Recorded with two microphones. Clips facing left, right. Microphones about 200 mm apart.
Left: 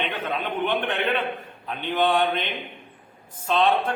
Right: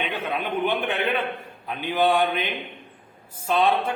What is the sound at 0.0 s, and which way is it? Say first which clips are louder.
A man's voice: even; 10° right (ahead or behind).